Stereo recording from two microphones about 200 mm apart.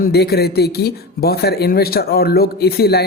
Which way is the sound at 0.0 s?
55° left (ahead or behind).